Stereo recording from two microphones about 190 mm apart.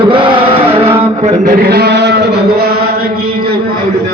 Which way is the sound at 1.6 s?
55° right (ahead or behind).